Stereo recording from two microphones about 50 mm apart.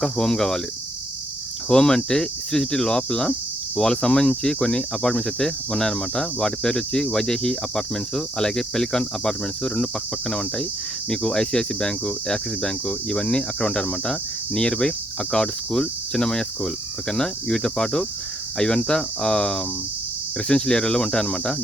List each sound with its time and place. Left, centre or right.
0.0 s speech: centre
1.7 s speech: centre